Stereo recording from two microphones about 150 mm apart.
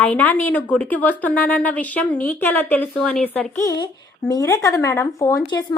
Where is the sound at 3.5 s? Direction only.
25° left (ahead or behind).